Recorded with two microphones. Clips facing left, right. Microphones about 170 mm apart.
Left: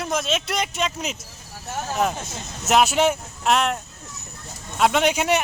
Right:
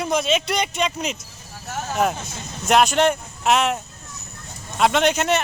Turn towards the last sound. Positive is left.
turn(degrees=10)  # may be behind; listen again after turning